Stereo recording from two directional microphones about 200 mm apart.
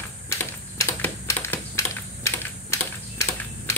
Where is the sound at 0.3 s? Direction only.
15° left (ahead or behind).